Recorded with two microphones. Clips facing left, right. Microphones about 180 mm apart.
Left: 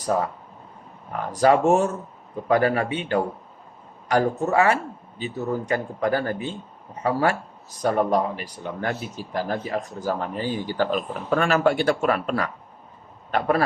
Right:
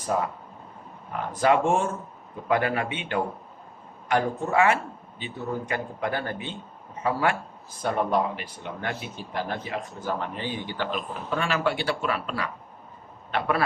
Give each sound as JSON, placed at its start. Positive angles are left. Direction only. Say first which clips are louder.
{"t": 0.0, "sound": "speech", "louder": "left 3 dB", "side_deg": 40}
{"t": 1.3, "sound": "a man's voice", "louder": "left 4 dB", "side_deg": 40}